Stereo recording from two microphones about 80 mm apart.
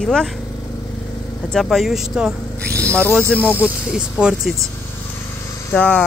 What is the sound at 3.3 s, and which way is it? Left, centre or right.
Speech, left.